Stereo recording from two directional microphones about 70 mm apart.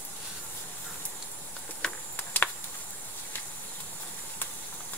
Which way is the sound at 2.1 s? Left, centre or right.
Left.